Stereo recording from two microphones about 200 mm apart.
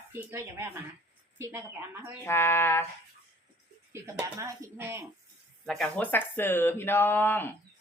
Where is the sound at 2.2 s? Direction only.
10° left (ahead or behind).